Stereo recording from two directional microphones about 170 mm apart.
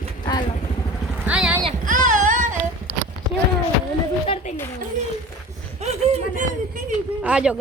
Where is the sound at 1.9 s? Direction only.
50° right (ahead or behind).